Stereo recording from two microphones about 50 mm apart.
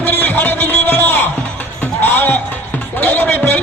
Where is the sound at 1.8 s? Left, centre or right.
Left.